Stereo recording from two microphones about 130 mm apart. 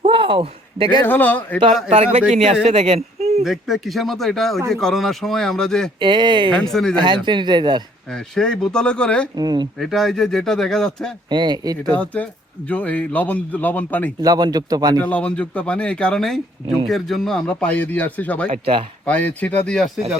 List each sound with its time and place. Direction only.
0.0 s a sound: 40° right (ahead or behind)
1.0 s a man's voice: 15° left (ahead or behind)
2.3 s speech: 55° right (ahead or behind)
3.4 s a man's voice: centre (ahead or behind)
6.0 s speech: 35° right (ahead or behind)
6.5 s a man's voice: 5° left (ahead or behind)
6.9 s speech: 35° right (ahead or behind)
8.1 s a man's voice: 5° left (ahead or behind)
9.3 s speech: 30° right (ahead or behind)
9.7 s a man's voice: centre (ahead or behind)
11.3 s speech: 35° right (ahead or behind)
11.9 s a man's voice: 10° left (ahead or behind)
14.2 s speech: 30° right (ahead or behind)
15.0 s a man's voice: 10° left (ahead or behind)